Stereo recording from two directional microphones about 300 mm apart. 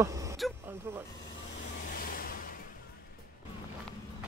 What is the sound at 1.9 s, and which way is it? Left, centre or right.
Music, left.